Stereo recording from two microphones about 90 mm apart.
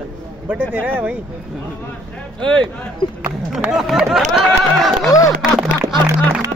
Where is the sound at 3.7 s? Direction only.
5° right (ahead or behind).